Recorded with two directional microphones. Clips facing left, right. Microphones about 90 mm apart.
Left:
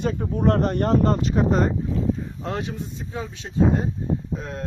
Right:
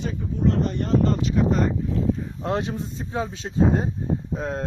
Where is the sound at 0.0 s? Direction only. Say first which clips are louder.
Left 2 dB; 60° left (ahead or behind); by 1.7 s 40° left (ahead or behind).